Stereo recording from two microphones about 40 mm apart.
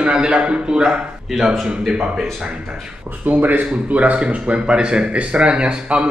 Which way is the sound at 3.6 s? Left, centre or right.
Right.